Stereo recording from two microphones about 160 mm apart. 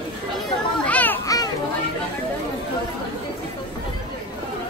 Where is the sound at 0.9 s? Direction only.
10° left (ahead or behind).